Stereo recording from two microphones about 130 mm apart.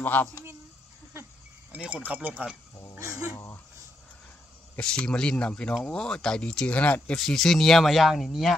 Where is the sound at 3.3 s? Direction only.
20° left (ahead or behind).